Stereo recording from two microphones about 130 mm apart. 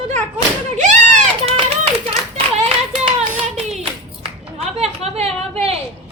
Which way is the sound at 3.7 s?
50° right (ahead or behind).